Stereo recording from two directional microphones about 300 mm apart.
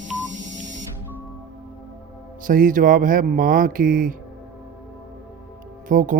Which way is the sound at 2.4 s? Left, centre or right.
Right.